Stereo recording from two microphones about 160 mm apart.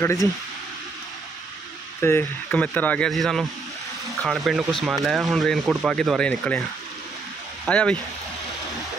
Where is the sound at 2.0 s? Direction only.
10° left (ahead or behind).